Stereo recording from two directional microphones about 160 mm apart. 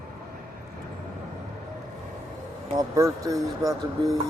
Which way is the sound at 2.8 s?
20° right (ahead or behind).